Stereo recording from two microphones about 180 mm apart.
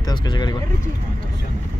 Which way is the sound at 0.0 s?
25° left (ahead or behind).